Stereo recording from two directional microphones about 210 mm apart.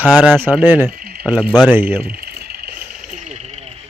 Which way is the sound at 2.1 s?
45° right (ahead or behind).